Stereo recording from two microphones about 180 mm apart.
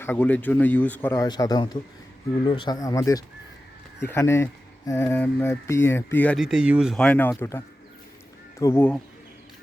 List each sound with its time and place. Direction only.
0.0 s a man's voice: 10° left (ahead or behind)
6.3 s speech: 5° right (ahead or behind); by 9.0 s 10° left (ahead or behind)